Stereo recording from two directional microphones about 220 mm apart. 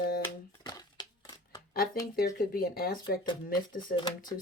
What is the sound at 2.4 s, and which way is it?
Speech, 40° left (ahead or behind).